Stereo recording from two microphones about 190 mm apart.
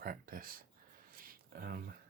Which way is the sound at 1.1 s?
50° right (ahead or behind).